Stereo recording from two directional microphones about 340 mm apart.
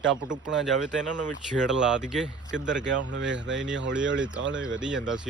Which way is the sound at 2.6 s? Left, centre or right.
Right.